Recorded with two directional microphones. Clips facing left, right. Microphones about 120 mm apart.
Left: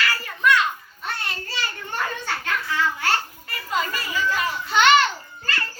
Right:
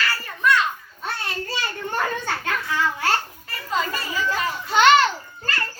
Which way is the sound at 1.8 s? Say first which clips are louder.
Right 4 dB; 40° right (ahead or behind).